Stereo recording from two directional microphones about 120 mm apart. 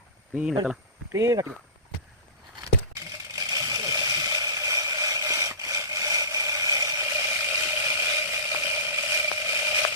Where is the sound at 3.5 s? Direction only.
30° right (ahead or behind).